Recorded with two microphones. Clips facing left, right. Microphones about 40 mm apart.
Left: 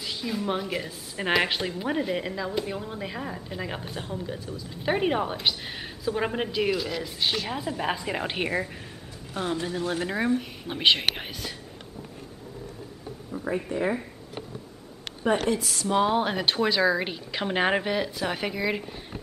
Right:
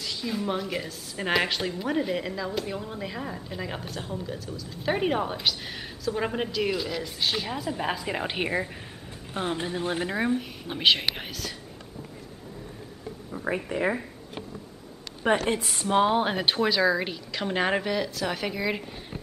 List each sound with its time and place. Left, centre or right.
0.0 s a sound: centre
0.5 s speech: centre
4.6 s speech: centre
4.9 s speech: centre
7.7 s speech: centre
9.3 s speech: right
10.0 s speech: centre
15.2 s speech: right
15.7 s speech: right
16.1 s speech: centre
18.5 s speech: centre